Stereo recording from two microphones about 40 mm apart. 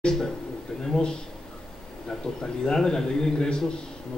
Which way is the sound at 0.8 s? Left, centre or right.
Centre.